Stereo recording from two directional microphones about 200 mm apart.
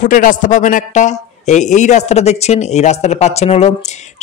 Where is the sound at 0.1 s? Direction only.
40° left (ahead or behind).